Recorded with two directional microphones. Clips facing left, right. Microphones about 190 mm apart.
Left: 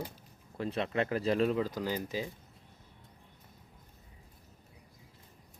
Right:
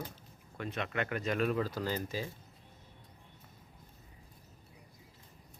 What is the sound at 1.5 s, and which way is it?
Speech, 15° left (ahead or behind).